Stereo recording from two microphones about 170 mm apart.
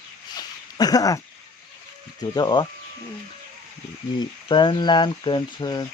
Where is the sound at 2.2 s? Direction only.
25° left (ahead or behind).